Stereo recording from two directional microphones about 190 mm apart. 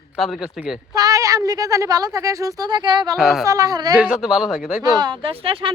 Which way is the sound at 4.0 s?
5° right (ahead or behind).